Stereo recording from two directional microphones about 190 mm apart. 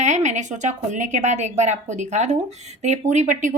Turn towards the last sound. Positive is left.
turn(degrees=-40)  # may be behind; listen again after turning